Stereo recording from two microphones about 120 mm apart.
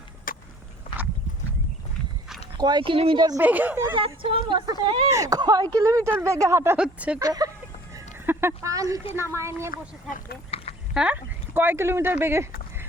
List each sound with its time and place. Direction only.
2.6 s a woman's voice: 35° right (ahead or behind)
3.4 s speech: 15° right (ahead or behind)
3.9 s a woman's voice: 50° right (ahead or behind); by 6.7 s 25° right (ahead or behind)
6.7 s speech: 10° right (ahead or behind)
7.2 s a woman's voice: 30° right (ahead or behind)
7.9 s a sound: 20° right (ahead or behind)
9.1 s speech: 20° right (ahead or behind)
10.5 s a sound: 55° left (ahead or behind)
10.9 s speech: 10° right (ahead or behind)